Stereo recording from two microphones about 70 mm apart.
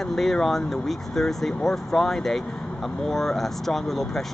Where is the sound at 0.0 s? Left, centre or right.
Centre.